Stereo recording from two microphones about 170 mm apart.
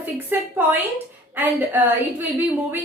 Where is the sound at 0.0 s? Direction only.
10° right (ahead or behind).